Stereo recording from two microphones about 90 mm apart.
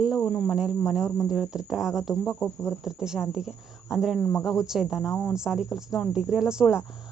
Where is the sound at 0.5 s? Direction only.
10° right (ahead or behind).